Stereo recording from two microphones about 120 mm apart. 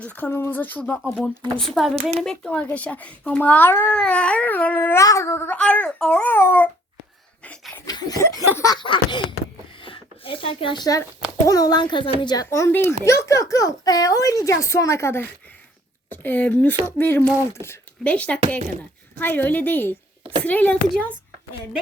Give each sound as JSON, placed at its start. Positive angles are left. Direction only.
{"t": 0.0, "sound": "a child's voice", "side_deg": 15}
{"t": 1.5, "sound": "speech", "side_deg": 0}
{"t": 2.0, "sound": "speech", "side_deg": -60}
{"t": 2.2, "sound": "a child's voice", "side_deg": 5}
{"t": 7.9, "sound": "a sound", "side_deg": 35}
{"t": 8.2, "sound": "speech", "side_deg": 25}
{"t": 8.8, "sound": "speech", "side_deg": 40}
{"t": 9.8, "sound": "a sound", "side_deg": 45}
{"t": 11.4, "sound": "speech", "side_deg": 30}
{"t": 12.3, "sound": "a child's voice", "side_deg": 30}
{"t": 18.0, "sound": "a child's voice", "side_deg": 10}